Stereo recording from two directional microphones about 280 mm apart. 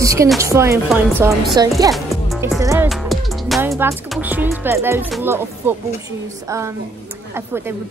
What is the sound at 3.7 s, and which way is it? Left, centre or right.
Speech, centre.